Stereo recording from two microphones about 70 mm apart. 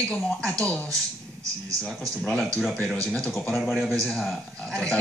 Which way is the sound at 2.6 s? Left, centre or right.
Centre.